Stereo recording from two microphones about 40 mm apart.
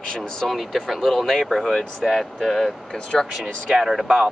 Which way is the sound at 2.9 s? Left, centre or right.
Centre.